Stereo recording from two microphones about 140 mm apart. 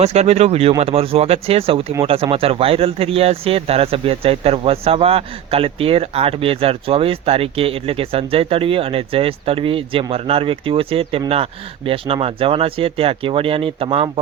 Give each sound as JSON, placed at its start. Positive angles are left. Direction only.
{"t": 0.0, "sound": "speech", "side_deg": -50}